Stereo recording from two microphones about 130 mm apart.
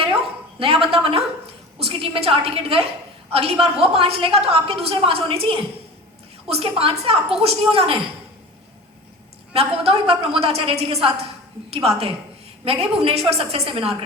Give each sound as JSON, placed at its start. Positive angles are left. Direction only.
{"t": 0.6, "sound": "a woman's voice", "side_deg": -45}
{"t": 9.5, "sound": "a woman's voice", "side_deg": -50}